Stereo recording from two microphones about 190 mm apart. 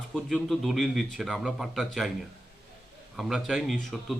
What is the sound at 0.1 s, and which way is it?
Speech, centre (ahead or behind).